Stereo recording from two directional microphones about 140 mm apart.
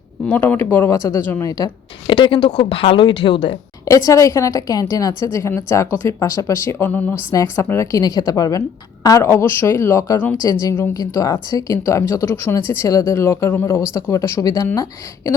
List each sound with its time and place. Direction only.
0.3 s speech: 15° left (ahead or behind)
2.0 s speech: 35° left (ahead or behind)
3.8 s a woman's voice: 20° left (ahead or behind)